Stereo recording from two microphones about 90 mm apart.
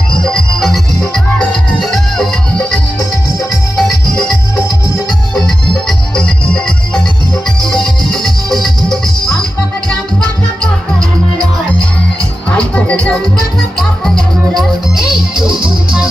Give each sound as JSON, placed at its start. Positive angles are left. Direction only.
{"t": 0.3, "sound": "music", "side_deg": 5}
{"t": 3.8, "sound": "music", "side_deg": 5}
{"t": 12.5, "sound": "music", "side_deg": 15}
{"t": 15.0, "sound": "music", "side_deg": -5}